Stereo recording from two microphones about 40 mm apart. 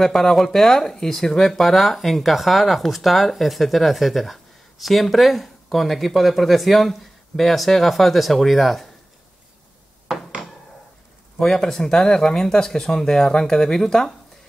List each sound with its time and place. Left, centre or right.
0.0 s speech: centre
10.0 s a sound: centre
11.3 s speech: centre